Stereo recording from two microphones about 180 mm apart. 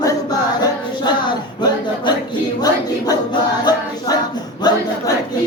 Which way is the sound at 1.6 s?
25° left (ahead or behind).